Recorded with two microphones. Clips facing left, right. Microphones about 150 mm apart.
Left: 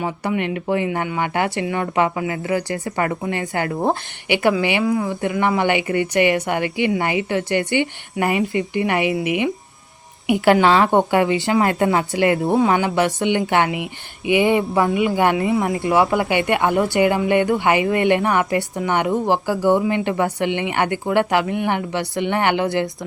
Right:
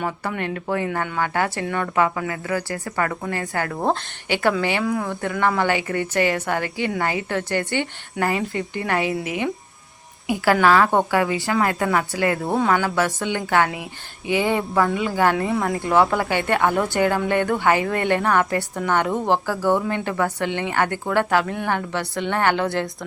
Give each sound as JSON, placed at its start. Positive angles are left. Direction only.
{"t": 0.0, "sound": "a woman's voice", "side_deg": 15}
{"t": 4.8, "sound": "speech", "side_deg": 0}
{"t": 5.0, "sound": "a woman's voice", "side_deg": 15}